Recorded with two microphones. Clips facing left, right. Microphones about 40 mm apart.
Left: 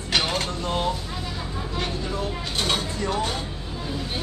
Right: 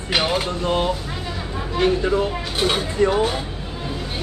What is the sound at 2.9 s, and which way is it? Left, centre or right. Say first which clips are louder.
Speech: right 8 dB; right.